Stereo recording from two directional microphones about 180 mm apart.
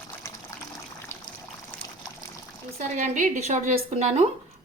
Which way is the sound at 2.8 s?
45° right (ahead or behind).